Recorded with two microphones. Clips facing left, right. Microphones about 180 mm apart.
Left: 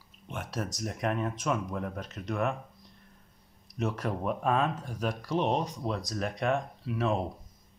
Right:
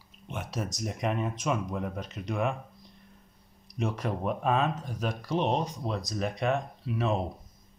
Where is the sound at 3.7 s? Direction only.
5° left (ahead or behind).